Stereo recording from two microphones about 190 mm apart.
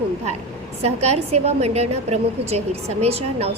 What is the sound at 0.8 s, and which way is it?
A woman's voice, 35° right (ahead or behind).